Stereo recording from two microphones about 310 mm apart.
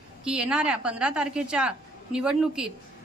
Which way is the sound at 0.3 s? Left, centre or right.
Centre.